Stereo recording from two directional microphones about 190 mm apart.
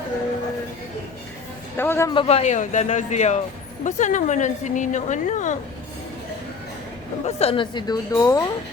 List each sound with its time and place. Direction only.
1.7 s a man's voice: 10° left (ahead or behind)
2.1 s a woman's voice: 30° left (ahead or behind)
7.3 s a woman's voice: 30° left (ahead or behind); by 8.4 s 15° left (ahead or behind)